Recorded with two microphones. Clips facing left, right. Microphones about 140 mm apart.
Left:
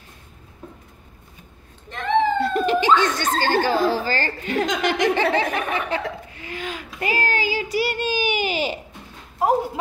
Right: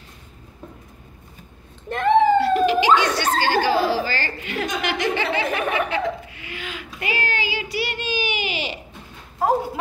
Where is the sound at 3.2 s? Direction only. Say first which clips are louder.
Right 1 dB; 45° left (ahead or behind).